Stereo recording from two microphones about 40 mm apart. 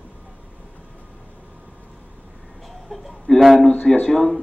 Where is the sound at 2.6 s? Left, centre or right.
Centre.